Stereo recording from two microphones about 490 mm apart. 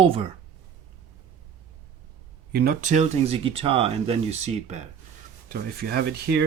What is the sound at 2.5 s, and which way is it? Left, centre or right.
Speech, centre.